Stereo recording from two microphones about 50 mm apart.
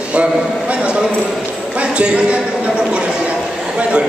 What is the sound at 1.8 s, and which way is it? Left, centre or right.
Speech, right.